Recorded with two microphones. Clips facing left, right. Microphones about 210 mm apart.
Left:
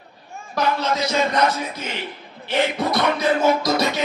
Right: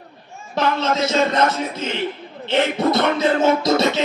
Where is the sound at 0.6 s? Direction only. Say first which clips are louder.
Right 2 dB; 25° right (ahead or behind).